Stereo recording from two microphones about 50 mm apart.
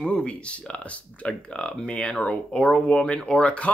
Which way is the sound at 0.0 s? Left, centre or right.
Left.